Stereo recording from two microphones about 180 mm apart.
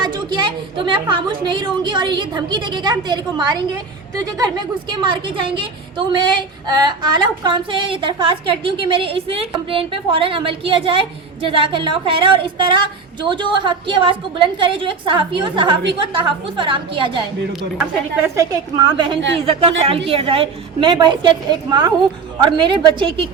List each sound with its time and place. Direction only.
0.0 s a woman's voice: 25° right (ahead or behind)
17.7 s a woman's voice: 10° right (ahead or behind)
18.8 s a woman's voice: 25° right (ahead or behind)